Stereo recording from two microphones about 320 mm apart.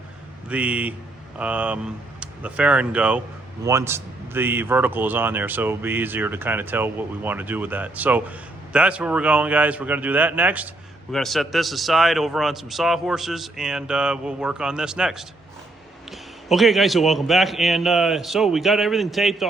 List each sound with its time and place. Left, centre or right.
0.4 s a man's voice: centre
16.5 s a man's voice: centre